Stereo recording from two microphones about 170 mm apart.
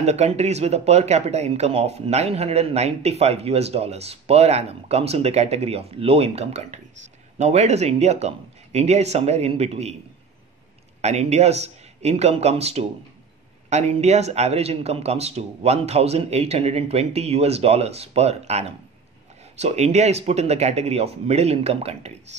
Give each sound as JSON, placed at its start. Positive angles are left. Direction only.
{"t": 0.0, "sound": "speech", "side_deg": -40}
{"t": 11.0, "sound": "speech", "side_deg": -40}